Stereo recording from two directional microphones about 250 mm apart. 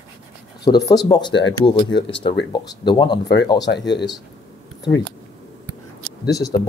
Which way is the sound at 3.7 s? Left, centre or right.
Left.